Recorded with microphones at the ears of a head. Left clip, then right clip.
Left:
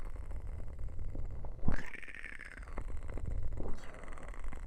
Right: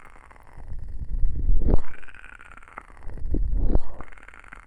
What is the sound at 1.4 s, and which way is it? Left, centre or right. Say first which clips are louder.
Wild animals: right 12 dB; right.